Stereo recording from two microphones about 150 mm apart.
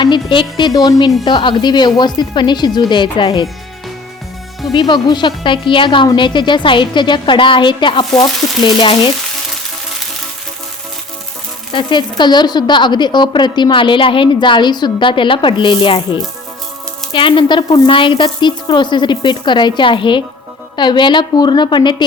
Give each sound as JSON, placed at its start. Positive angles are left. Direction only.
{"t": 0.0, "sound": "a woman's voice", "side_deg": 30}
{"t": 4.7, "sound": "a woman's voice", "side_deg": 30}
{"t": 11.7, "sound": "a woman's voice", "side_deg": 30}